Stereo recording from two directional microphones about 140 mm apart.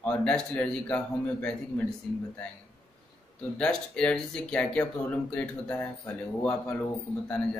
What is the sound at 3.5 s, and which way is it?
Speech, 5° left (ahead or behind).